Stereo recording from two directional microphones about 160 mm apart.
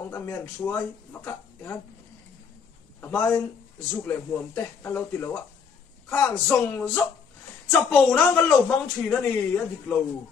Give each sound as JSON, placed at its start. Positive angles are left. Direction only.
{"t": 0.1, "sound": "speech", "side_deg": 15}
{"t": 3.0, "sound": "speech", "side_deg": 10}